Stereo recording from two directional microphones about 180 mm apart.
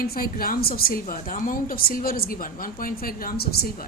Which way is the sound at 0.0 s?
55° left (ahead or behind).